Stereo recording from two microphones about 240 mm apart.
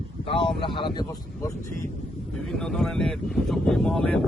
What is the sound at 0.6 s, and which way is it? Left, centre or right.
Speech, centre.